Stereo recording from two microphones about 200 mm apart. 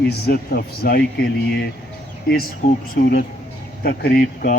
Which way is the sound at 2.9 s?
45° left (ahead or behind).